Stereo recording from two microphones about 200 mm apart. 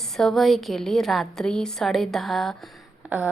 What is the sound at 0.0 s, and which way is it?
Speech, centre (ahead or behind).